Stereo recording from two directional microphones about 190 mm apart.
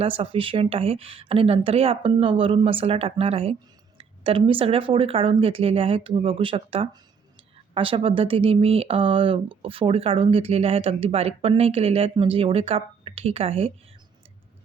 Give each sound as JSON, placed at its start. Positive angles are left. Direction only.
{"t": 0.0, "sound": "speech", "side_deg": -30}